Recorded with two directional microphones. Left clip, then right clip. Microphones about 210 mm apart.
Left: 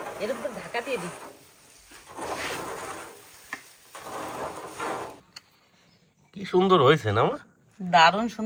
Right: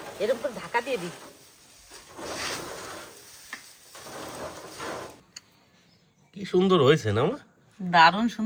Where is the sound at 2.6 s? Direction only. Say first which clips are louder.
Left 3 dB; 25° left (ahead or behind).